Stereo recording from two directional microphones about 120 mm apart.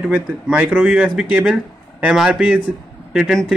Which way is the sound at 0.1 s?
15° right (ahead or behind).